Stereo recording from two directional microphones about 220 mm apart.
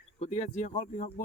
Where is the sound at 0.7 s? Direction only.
30° left (ahead or behind).